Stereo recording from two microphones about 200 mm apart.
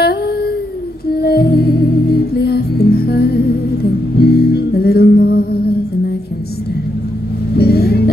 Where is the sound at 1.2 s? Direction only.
50° left (ahead or behind).